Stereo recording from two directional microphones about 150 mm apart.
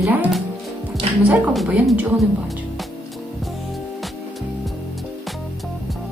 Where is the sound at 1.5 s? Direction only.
Centre (ahead or behind).